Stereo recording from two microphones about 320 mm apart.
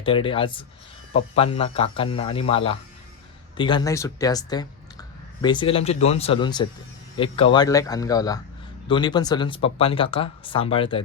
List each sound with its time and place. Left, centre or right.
0.0 s speech: centre